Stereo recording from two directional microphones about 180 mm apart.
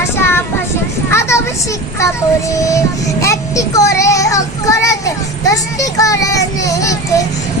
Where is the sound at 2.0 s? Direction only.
15° left (ahead or behind).